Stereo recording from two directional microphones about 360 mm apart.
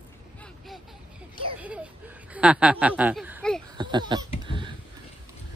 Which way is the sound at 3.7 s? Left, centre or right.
Centre.